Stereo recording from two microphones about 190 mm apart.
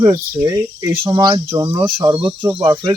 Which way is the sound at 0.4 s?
20° right (ahead or behind).